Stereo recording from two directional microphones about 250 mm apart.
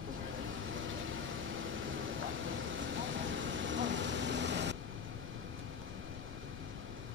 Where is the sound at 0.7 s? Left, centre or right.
Right.